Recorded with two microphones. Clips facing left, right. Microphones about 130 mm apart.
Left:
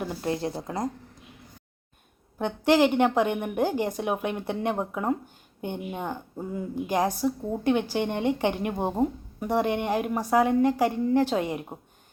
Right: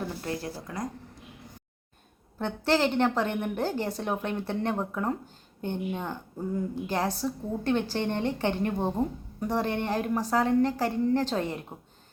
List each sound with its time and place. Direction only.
0.0 s speech: 20° left (ahead or behind)
2.4 s a woman's voice: 15° left (ahead or behind)